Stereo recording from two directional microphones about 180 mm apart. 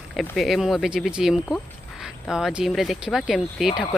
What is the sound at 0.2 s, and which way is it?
Speech, centre (ahead or behind).